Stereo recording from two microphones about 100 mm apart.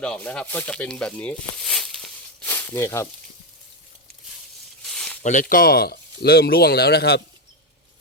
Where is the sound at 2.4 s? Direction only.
20° left (ahead or behind).